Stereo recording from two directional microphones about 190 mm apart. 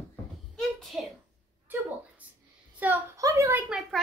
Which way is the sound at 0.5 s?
Centre (ahead or behind).